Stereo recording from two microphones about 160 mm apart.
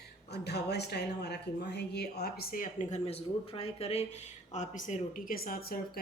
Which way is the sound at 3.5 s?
40° left (ahead or behind).